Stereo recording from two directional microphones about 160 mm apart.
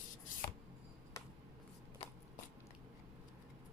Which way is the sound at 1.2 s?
25° left (ahead or behind).